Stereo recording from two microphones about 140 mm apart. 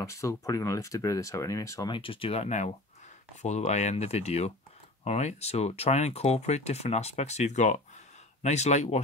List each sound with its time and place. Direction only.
0.0 s speech: 20° left (ahead or behind)
1.9 s speech: 40° left (ahead or behind)